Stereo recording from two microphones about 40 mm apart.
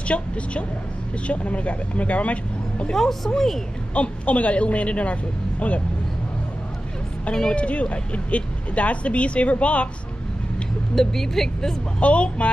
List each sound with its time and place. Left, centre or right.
0.1 s speech: left
2.9 s speech: centre
3.9 s speech: left
7.5 s speech: left
11.0 s speech: centre
12.0 s speech: left